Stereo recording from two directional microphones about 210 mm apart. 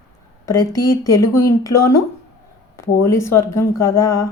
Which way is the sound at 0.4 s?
15° left (ahead or behind).